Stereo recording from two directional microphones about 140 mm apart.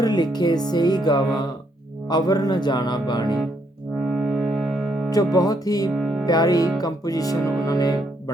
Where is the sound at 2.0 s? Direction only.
30° left (ahead or behind).